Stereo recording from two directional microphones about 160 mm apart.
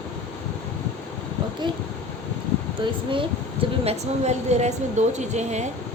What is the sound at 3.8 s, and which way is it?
A woman's voice, 45° right (ahead or behind).